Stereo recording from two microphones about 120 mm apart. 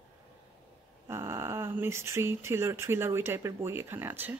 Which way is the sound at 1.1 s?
20° right (ahead or behind).